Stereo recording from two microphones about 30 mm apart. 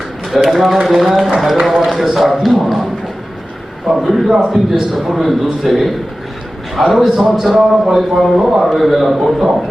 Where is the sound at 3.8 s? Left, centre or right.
Right.